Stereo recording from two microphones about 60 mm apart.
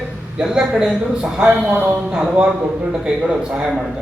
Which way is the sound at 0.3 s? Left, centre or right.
Centre.